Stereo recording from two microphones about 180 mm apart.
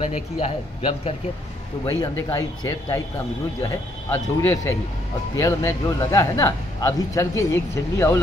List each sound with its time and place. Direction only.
0.0 s a man's voice: 30° left (ahead or behind)
1.9 s speech: 15° left (ahead or behind)